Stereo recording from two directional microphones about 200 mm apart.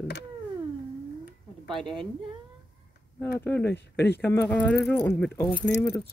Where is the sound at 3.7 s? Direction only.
55° left (ahead or behind).